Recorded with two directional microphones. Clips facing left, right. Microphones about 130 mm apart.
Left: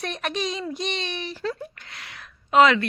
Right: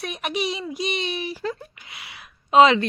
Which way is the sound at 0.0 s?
10° right (ahead or behind).